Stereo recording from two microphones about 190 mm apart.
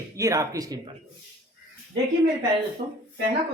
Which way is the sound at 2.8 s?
30° right (ahead or behind).